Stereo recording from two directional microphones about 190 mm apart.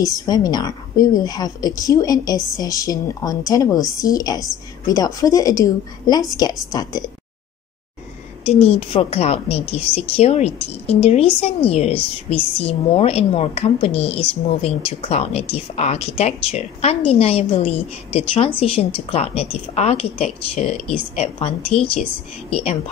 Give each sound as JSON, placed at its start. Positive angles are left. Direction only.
{"t": 0.0, "sound": "a woman's voice", "side_deg": 20}
{"t": 8.5, "sound": "a woman's voice", "side_deg": 30}